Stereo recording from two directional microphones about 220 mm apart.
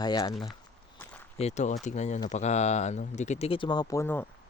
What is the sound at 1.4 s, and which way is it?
Speech, 30° left (ahead or behind).